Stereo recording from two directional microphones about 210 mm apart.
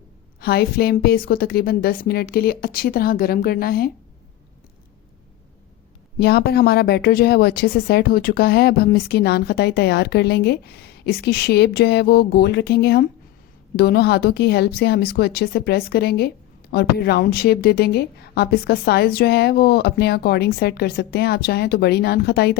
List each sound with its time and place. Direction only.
0.3 s a woman's voice: 50° left (ahead or behind)
6.1 s a woman's voice: 50° left (ahead or behind)